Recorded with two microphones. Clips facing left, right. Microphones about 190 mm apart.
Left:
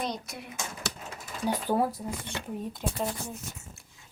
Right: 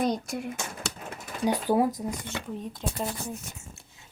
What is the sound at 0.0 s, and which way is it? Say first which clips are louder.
Speech: right 7 dB; 45° right (ahead or behind).